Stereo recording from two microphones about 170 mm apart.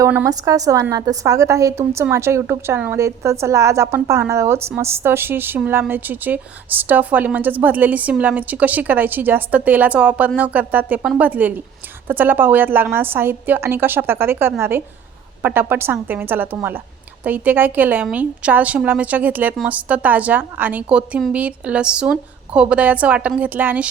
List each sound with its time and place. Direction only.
0.0 s a woman's voice: 15° right (ahead or behind)